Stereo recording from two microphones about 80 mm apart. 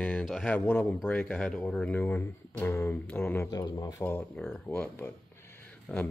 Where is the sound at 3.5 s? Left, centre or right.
Left.